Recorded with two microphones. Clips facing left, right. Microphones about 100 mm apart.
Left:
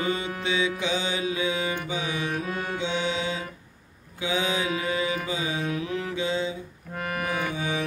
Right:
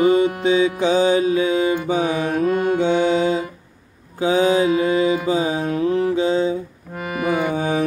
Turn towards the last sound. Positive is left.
turn(degrees=-45)  # may be behind; listen again after turning